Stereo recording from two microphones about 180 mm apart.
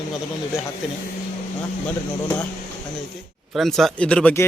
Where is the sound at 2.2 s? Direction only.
15° left (ahead or behind).